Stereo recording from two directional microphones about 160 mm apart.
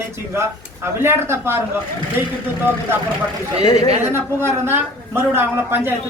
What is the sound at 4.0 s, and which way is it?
A woman's voice, 15° right (ahead or behind).